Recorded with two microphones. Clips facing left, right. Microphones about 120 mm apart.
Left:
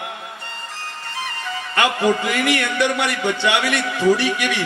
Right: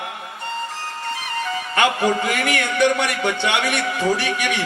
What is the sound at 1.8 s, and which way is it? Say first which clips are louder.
A man's voice: left 1 dB; 25° right (ahead or behind).